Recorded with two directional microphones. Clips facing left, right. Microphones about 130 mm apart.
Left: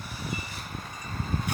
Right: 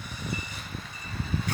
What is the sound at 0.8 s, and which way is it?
Vehicle, 45° left (ahead or behind).